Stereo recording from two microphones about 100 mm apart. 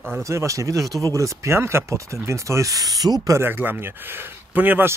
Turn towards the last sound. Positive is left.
turn(degrees=-20)  # may be behind; listen again after turning